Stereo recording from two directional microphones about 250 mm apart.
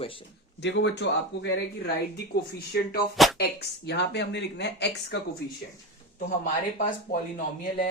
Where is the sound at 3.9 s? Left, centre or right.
Left.